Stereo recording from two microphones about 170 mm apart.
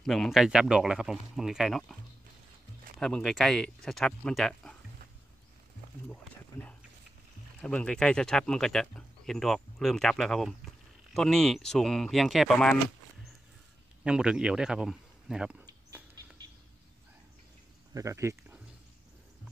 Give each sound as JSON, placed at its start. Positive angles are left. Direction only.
{"t": 0.0, "sound": "speech", "side_deg": 0}
{"t": 3.0, "sound": "speech", "side_deg": 5}
{"t": 7.6, "sound": "speech", "side_deg": 5}
{"t": 14.0, "sound": "speech", "side_deg": -5}
{"t": 15.6, "sound": "a sound", "side_deg": -20}
{"t": 17.9, "sound": "speech", "side_deg": -15}